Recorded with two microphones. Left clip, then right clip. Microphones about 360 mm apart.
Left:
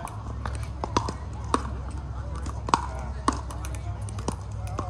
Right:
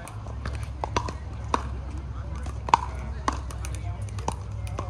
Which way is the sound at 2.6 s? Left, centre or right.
Centre.